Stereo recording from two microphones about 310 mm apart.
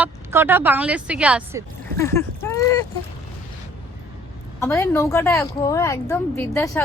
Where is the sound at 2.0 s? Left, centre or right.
Centre.